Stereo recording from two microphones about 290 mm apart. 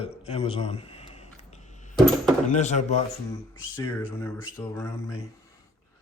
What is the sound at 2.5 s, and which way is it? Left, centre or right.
Speech, left.